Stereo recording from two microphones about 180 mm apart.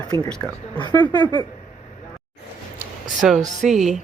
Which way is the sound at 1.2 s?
25° right (ahead or behind).